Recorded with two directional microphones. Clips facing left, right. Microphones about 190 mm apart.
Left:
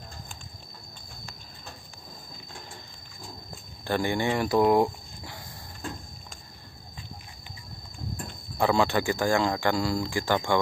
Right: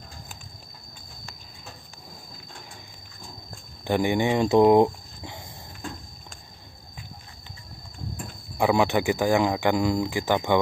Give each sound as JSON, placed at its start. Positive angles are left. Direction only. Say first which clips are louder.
{"t": 3.8, "sound": "speech", "louder": "right 4 dB", "side_deg": -15}
{"t": 8.5, "sound": "speech", "louder": "right 2 dB", "side_deg": -15}